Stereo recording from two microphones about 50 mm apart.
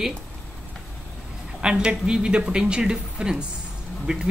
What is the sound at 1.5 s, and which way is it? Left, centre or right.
Speech, centre.